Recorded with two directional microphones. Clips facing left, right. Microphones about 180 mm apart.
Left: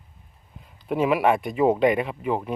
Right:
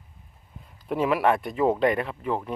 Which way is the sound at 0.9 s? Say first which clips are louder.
Left 2 dB; 5° left (ahead or behind).